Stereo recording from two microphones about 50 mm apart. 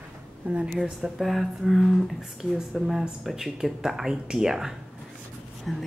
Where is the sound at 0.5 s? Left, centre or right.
Right.